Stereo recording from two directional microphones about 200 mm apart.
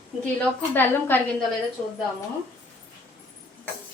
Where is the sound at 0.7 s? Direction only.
10° left (ahead or behind).